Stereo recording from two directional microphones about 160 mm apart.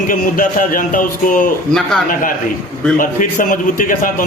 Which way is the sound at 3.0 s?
55° left (ahead or behind).